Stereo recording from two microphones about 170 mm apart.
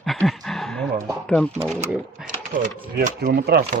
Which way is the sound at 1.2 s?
5° left (ahead or behind).